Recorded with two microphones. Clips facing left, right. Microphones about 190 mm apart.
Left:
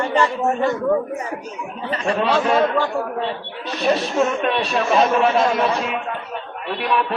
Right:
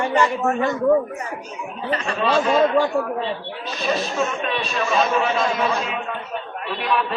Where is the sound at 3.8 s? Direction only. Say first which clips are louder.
Left 4 dB; 65° left (ahead or behind).